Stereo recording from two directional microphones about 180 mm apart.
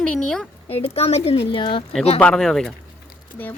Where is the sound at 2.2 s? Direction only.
5° left (ahead or behind).